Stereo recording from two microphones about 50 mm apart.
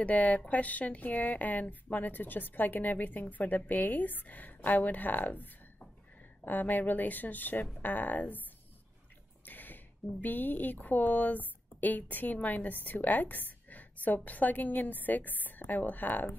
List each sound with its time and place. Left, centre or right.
0.0 s a woman's voice: left
9.5 s a sound: left
10.2 s a woman's voice: left